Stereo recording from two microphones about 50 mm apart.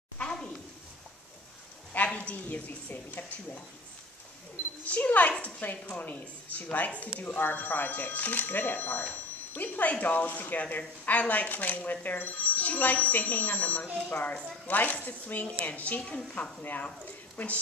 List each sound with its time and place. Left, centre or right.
0.2 s a sound: centre
2.1 s a woman's voice: left
4.8 s a woman's voice: left